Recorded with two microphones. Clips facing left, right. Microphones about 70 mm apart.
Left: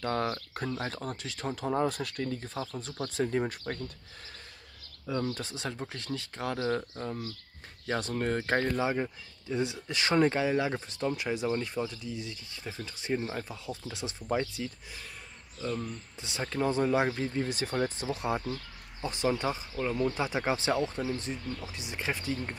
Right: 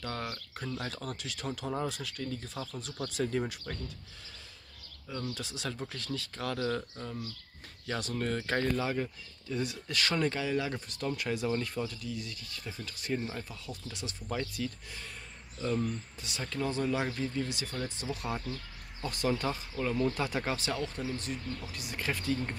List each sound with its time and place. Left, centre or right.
0.0 s speech: left
0.7 s speech: left
1.8 s speech: left
2.3 s speech: left
5.2 s speech: left
15.6 s speech: centre
16.2 s speech: left
18.0 s speech: left